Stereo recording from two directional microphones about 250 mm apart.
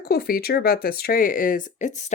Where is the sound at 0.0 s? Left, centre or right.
Left.